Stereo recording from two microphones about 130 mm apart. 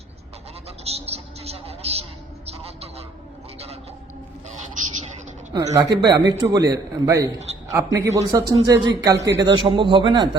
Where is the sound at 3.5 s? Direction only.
50° right (ahead or behind).